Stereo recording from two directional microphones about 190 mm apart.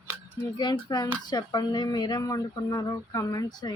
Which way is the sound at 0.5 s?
25° left (ahead or behind).